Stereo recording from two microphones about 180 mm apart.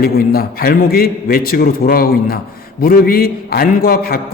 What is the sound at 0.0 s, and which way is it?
A man's voice, 55° left (ahead or behind).